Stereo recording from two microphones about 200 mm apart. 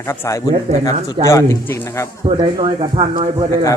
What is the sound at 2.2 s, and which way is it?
Speech, 25° right (ahead or behind).